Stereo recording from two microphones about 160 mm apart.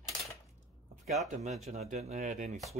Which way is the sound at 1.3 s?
45° right (ahead or behind).